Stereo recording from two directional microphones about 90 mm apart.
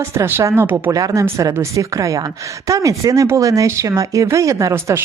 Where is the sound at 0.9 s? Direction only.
40° right (ahead or behind).